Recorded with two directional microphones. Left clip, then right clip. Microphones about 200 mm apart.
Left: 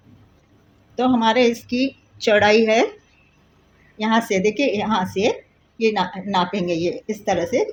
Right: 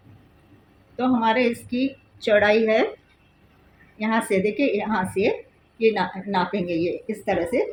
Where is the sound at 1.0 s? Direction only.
40° left (ahead or behind).